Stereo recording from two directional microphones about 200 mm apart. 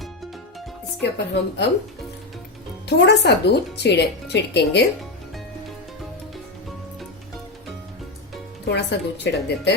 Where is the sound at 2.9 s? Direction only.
60° left (ahead or behind).